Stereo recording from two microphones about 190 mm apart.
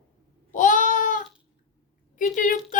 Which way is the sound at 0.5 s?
40° left (ahead or behind).